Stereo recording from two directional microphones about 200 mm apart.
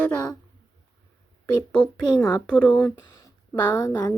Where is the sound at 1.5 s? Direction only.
5° left (ahead or behind).